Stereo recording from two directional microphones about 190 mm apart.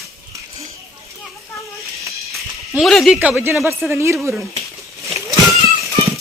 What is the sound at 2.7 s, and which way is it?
Speech, centre (ahead or behind).